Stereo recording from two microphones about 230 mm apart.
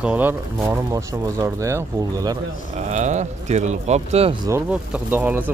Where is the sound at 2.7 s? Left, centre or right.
Right.